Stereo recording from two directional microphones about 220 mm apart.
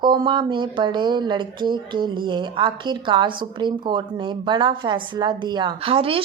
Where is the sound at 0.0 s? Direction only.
20° right (ahead or behind).